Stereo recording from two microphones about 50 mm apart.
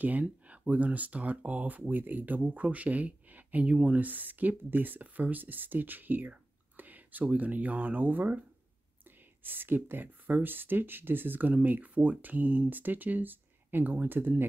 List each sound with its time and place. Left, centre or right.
0.0 s speech: right